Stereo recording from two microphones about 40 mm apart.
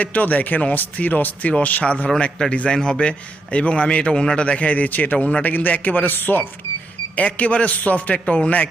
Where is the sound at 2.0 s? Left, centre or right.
Centre; by 6.5 s left.